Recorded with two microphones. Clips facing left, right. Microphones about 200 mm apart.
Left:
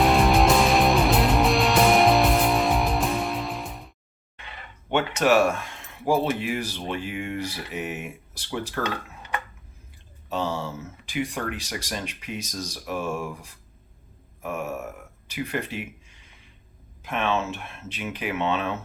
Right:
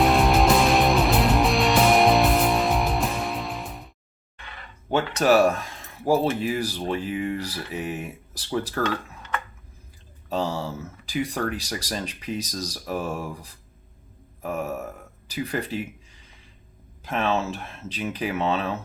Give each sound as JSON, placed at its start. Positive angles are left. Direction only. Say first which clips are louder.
{"t": 0.0, "sound": "music", "louder": "even", "side_deg": 0}
{"t": 4.9, "sound": "speech", "louder": "right 1 dB", "side_deg": -35}
{"t": 10.2, "sound": "speech", "louder": "right 1 dB", "side_deg": -35}